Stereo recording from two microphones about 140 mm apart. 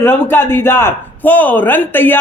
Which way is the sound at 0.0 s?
15° left (ahead or behind).